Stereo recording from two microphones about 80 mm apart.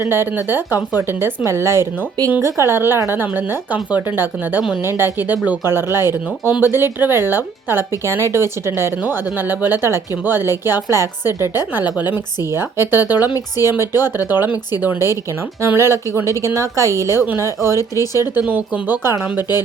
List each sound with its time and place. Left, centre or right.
0.0 s a woman's voice: right
11.9 s speech: right
12.5 s a woman's voice: right
17.7 s speech: left
18.4 s speech: centre
19.4 s speech: left